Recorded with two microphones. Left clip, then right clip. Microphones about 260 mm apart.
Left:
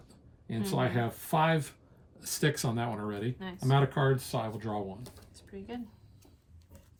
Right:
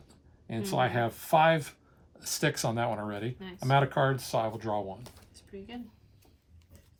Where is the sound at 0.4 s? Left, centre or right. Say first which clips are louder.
Right 3 dB; right.